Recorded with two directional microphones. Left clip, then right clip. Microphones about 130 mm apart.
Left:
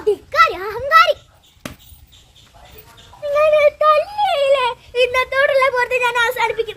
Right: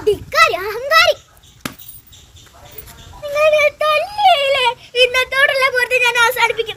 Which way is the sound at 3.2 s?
15° left (ahead or behind).